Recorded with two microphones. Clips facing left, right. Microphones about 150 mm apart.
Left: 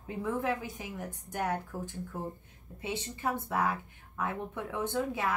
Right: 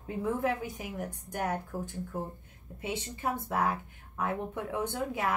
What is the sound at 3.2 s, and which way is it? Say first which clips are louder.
Speech: even; 20° right (ahead or behind).